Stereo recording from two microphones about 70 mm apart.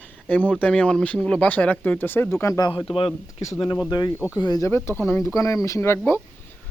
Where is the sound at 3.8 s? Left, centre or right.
Left.